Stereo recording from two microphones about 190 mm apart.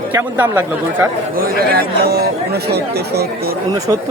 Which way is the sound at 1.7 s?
55° right (ahead or behind).